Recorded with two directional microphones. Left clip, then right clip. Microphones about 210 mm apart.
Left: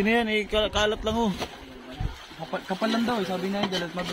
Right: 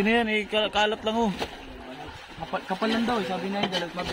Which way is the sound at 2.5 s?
30° left (ahead or behind).